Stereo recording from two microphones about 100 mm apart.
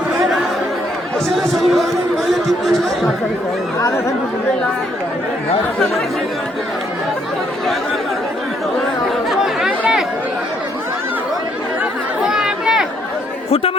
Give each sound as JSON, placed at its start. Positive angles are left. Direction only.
{"t": 1.4, "sound": "music", "side_deg": 0}
{"t": 3.8, "sound": "speech", "side_deg": 30}
{"t": 9.3, "sound": "chatter", "side_deg": -5}
{"t": 12.2, "sound": "chatter", "side_deg": -5}
{"t": 13.5, "sound": "speech", "side_deg": 75}